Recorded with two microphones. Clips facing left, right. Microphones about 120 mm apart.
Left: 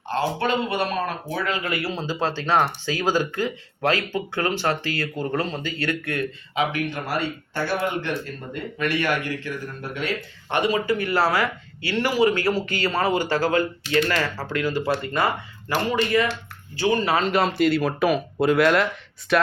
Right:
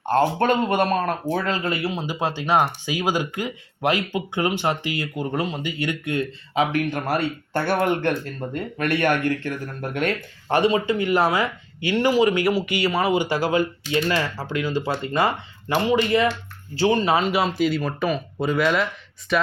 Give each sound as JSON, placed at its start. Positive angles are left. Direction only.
{"t": 0.0, "sound": "speech", "side_deg": -50}
{"t": 1.3, "sound": "speech", "side_deg": -35}
{"t": 6.5, "sound": "speech", "side_deg": -45}
{"t": 10.5, "sound": "speech", "side_deg": -30}
{"t": 17.2, "sound": "speech", "side_deg": -5}